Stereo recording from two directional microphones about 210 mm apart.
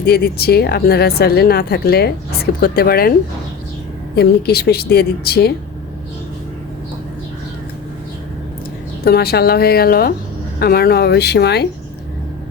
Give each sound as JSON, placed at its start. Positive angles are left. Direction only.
{"t": 0.0, "sound": "speech", "side_deg": 50}
{"t": 4.1, "sound": "speech", "side_deg": 50}
{"t": 9.0, "sound": "speech", "side_deg": 50}